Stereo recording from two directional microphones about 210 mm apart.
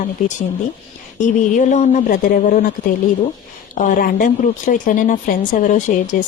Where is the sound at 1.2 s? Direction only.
35° left (ahead or behind).